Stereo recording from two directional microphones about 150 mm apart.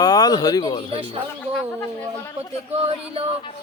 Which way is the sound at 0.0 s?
25° left (ahead or behind).